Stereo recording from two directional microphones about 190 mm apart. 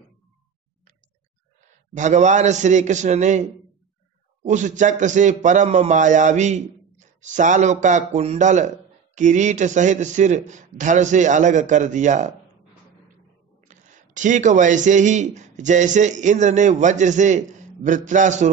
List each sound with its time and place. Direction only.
2.0 s a man's voice: 40° right (ahead or behind)
13.7 s a man's voice: 40° right (ahead or behind)